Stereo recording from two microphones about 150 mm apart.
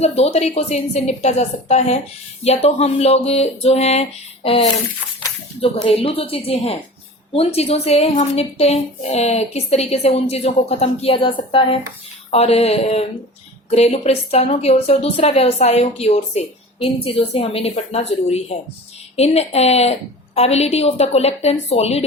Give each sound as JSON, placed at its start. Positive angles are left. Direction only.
{"t": 0.0, "sound": "a woman's voice", "side_deg": 45}